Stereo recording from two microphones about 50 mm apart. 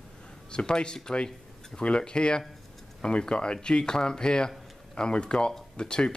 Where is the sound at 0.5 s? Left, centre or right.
Centre.